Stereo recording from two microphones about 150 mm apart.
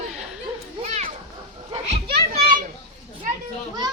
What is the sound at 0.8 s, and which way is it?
Children playing, 45° right (ahead or behind).